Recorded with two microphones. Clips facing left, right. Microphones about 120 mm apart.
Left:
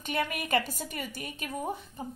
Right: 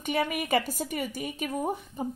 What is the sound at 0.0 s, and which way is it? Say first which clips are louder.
A woman's voice: right 4 dB; 10° right (ahead or behind).